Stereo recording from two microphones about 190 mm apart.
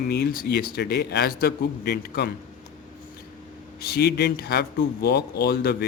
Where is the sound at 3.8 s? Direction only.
55° left (ahead or behind).